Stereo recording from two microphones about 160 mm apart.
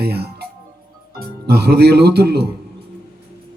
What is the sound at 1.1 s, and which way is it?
A man's voice, 80° right.